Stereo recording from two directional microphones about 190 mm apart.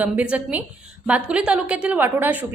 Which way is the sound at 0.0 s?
5° right (ahead or behind).